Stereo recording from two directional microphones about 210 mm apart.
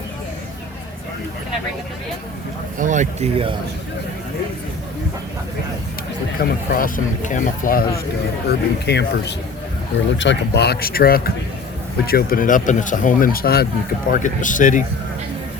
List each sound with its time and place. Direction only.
2.7 s speech: 35° right (ahead or behind)
6.4 s speech: 40° left (ahead or behind)